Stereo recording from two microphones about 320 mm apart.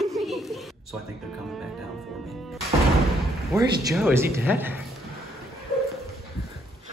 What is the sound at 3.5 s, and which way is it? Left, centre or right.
Speech, centre.